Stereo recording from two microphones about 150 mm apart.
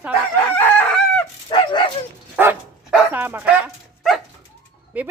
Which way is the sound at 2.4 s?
10° right (ahead or behind).